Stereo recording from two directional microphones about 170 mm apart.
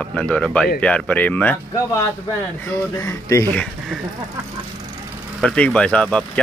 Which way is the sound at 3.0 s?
15° left (ahead or behind).